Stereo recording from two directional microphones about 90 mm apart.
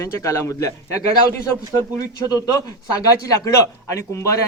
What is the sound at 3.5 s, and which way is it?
Speech, 35° left (ahead or behind).